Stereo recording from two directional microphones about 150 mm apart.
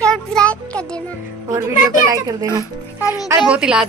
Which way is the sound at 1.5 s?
15° right (ahead or behind).